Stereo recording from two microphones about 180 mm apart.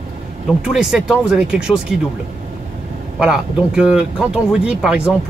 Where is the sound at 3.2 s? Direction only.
5° right (ahead or behind).